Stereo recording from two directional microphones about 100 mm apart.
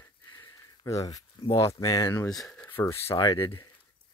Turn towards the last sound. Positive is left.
turn(degrees=35)  # may be behind; listen again after turning